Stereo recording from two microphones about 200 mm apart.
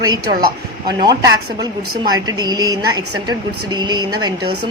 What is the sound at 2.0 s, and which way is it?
A woman's voice, 20° right (ahead or behind).